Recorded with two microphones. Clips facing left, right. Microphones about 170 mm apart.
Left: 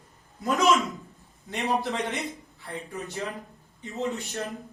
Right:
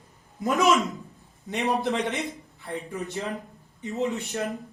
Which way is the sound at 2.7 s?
20° right (ahead or behind).